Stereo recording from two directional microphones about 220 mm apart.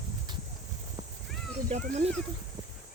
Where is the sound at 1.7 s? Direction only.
35° right (ahead or behind).